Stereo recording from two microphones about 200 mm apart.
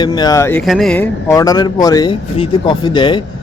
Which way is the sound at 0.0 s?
20° left (ahead or behind).